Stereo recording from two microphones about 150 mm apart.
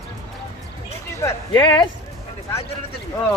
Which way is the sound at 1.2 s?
20° left (ahead or behind).